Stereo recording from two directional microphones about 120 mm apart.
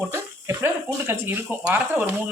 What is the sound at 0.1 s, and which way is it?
Speech, 20° right (ahead or behind).